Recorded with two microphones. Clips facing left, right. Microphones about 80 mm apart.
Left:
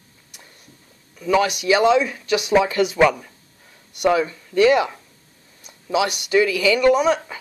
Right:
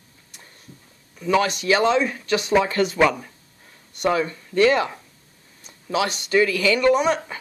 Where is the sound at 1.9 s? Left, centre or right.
Right.